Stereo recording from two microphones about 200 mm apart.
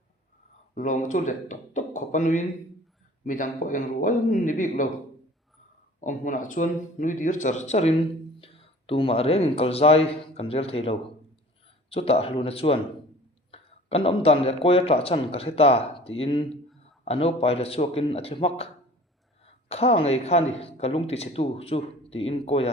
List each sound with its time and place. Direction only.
0.7 s speech: 40° left (ahead or behind)
6.0 s speech: 40° left (ahead or behind)